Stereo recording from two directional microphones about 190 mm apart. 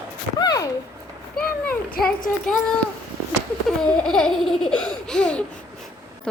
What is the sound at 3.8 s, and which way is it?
A woman's voice, 5° left (ahead or behind).